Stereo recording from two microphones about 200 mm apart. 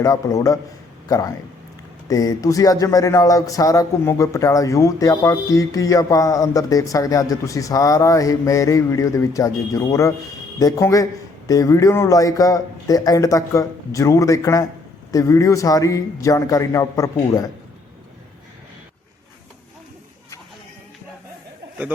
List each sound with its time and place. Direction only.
0.0 s speech: 15° left (ahead or behind)